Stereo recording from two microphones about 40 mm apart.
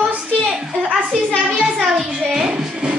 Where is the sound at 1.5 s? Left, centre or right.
Centre.